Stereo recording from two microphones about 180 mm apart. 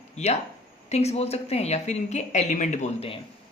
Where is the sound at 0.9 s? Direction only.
35° left (ahead or behind).